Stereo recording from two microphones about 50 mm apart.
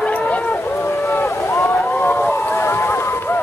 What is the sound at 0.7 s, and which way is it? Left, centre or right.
Boat, left.